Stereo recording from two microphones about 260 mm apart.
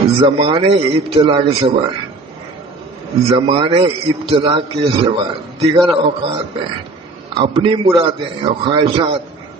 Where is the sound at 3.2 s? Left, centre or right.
Centre.